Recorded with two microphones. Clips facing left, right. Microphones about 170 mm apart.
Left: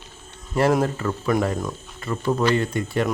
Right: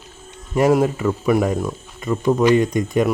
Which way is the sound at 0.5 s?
10° right (ahead or behind).